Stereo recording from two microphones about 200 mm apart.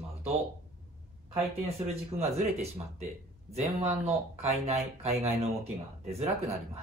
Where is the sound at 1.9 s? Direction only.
30° right (ahead or behind).